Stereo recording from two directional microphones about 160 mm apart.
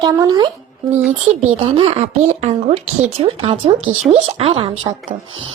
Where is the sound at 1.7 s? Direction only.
40° right (ahead or behind).